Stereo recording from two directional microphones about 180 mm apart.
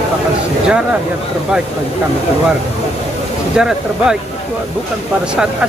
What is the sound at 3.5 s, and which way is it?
Speech, 5° right (ahead or behind).